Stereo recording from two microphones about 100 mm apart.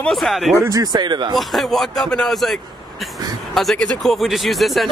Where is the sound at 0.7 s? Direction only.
40° right (ahead or behind).